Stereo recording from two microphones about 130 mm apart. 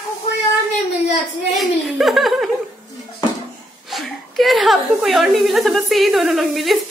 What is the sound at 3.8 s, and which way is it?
A woman's voice, centre (ahead or behind).